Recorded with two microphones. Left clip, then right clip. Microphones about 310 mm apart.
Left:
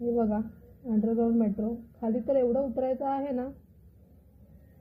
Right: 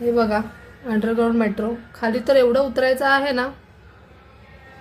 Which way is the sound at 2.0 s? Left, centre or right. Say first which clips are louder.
Right 11 dB; right.